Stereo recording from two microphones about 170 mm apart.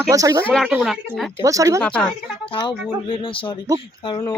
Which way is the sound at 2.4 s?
30° left (ahead or behind).